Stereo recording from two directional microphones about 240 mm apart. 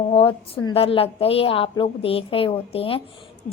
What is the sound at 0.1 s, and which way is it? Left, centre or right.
A woman's voice, left.